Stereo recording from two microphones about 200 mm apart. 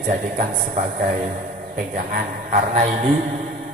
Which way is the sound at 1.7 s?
40° right (ahead or behind).